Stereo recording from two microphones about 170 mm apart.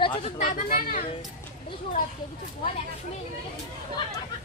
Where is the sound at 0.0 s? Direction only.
30° left (ahead or behind).